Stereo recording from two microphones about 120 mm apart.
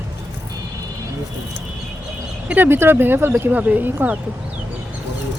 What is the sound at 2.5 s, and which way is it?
Speech, 15° right (ahead or behind).